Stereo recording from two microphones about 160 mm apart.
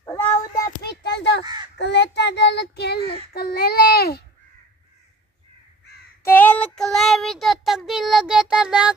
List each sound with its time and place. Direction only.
0.0 s child singing: 20° left (ahead or behind)
1.0 s crow: 90° left
1.4 s crow: 25° right (ahead or behind)
1.8 s child singing: 90° left
6.2 s child singing: 10° left (ahead or behind); by 8.9 s 5° right (ahead or behind)